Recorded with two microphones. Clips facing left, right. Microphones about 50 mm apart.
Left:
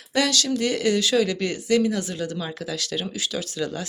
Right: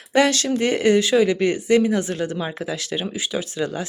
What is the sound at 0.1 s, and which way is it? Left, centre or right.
Speech, right.